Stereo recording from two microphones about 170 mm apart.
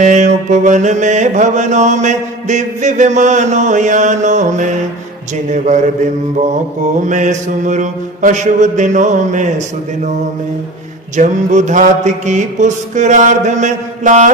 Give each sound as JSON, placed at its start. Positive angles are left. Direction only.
{"t": 0.0, "sound": "mantra", "side_deg": -45}
{"t": 11.2, "sound": "mantra", "side_deg": -45}